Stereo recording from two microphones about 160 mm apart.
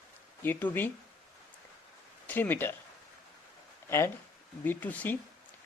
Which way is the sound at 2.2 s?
10° left (ahead or behind).